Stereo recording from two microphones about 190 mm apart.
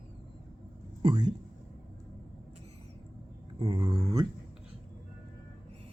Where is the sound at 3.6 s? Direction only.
20° right (ahead or behind).